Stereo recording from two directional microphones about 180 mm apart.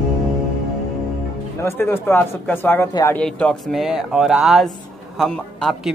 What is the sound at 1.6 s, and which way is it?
Speech, 15° left (ahead or behind).